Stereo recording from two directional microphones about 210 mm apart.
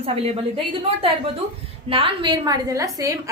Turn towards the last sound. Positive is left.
turn(degrees=-15)  # may be behind; listen again after turning